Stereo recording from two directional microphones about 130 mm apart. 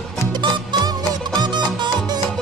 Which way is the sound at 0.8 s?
35° right (ahead or behind).